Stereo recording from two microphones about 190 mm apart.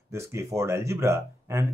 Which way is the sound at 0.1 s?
15° right (ahead or behind).